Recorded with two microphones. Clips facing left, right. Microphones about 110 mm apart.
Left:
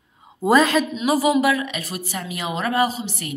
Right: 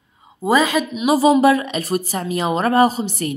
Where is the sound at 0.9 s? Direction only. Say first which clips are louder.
Right 3 dB; 20° right (ahead or behind).